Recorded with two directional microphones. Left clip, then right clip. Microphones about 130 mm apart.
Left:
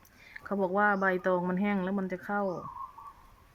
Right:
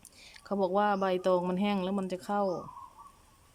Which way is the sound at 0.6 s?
30° right (ahead or behind).